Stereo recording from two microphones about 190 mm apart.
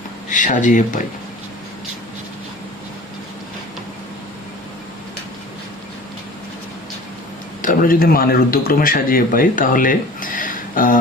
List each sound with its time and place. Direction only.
0.3 s speech: 40° left (ahead or behind)
7.6 s speech: 45° left (ahead or behind)